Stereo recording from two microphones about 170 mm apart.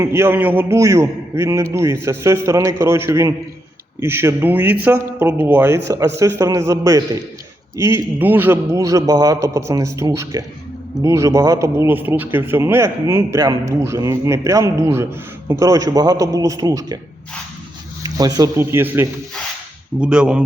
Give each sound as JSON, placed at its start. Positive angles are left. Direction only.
{"t": 0.0, "sound": "a man's voice", "side_deg": -15}
{"t": 18.0, "sound": "a man's voice", "side_deg": -20}